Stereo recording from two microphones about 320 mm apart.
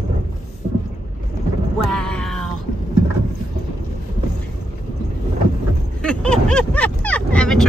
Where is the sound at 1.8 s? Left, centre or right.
Centre.